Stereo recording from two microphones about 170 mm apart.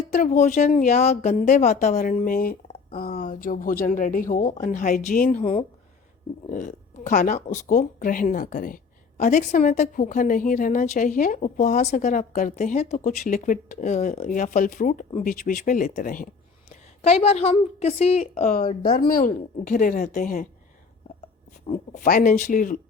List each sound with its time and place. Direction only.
0.1 s speech: 50° left (ahead or behind)
18.8 s speech: 60° left (ahead or behind)
21.7 s speech: 50° left (ahead or behind)